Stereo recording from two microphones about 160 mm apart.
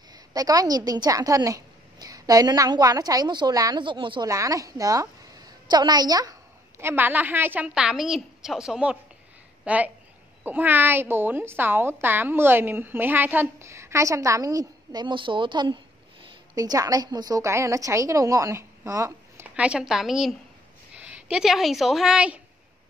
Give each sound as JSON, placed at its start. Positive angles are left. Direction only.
{"t": 0.1, "sound": "a woman's voice", "side_deg": -25}
{"t": 4.3, "sound": "a woman's voice", "side_deg": -20}
{"t": 6.8, "sound": "a woman's voice", "side_deg": -15}